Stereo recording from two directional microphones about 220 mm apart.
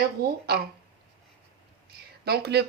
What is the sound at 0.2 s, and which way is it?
Speech, 45° right (ahead or behind).